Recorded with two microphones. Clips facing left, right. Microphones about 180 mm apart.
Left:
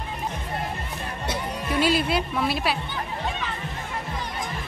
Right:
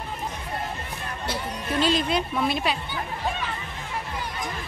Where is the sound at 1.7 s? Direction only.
10° left (ahead or behind).